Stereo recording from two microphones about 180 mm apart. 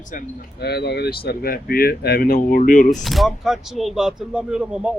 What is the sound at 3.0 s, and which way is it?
Speech, centre (ahead or behind).